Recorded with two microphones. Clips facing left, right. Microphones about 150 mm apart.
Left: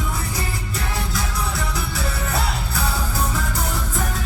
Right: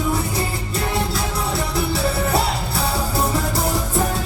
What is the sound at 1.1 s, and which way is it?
Music, 30° right (ahead or behind).